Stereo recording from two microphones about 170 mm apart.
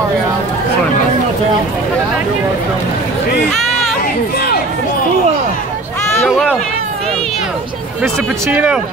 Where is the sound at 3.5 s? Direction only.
Centre (ahead or behind).